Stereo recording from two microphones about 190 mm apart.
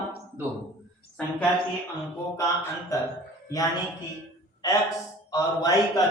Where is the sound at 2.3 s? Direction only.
15° left (ahead or behind).